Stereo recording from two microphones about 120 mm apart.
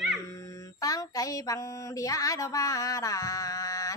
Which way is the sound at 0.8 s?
30° left (ahead or behind).